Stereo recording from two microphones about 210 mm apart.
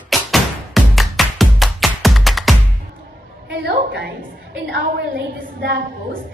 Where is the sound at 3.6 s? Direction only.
50° right (ahead or behind).